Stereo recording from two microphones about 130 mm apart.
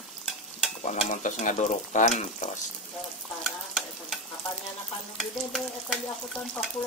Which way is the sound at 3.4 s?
Centre (ahead or behind).